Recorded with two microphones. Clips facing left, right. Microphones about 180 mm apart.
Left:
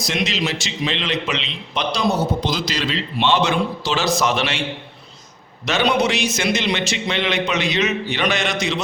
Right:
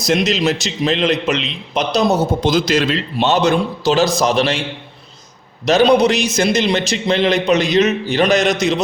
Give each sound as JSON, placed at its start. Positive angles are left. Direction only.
{"t": 0.1, "sound": "a man's voice", "side_deg": -45}
{"t": 5.6, "sound": "a man's voice", "side_deg": -35}